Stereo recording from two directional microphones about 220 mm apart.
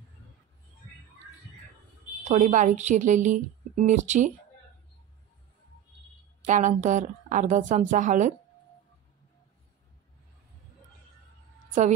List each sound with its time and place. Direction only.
2.2 s a woman's voice: 35° right (ahead or behind)
6.4 s a woman's voice: 35° right (ahead or behind)